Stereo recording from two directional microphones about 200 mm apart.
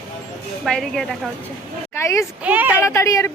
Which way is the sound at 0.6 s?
Centre (ahead or behind).